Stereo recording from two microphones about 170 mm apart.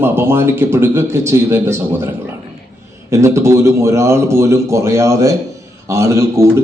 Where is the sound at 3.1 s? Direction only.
15° right (ahead or behind).